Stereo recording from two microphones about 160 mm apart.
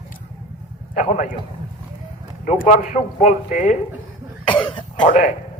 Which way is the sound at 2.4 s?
50° left (ahead or behind).